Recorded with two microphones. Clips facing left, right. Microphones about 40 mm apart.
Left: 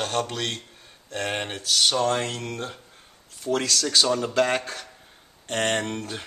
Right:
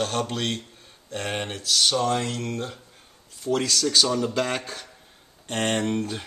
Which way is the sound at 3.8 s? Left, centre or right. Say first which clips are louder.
Even; centre.